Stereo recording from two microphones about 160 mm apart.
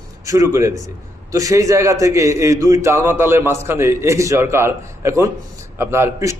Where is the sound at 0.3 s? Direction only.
20° right (ahead or behind).